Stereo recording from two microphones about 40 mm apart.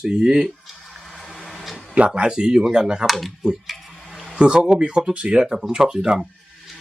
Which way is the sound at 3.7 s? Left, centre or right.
Centre.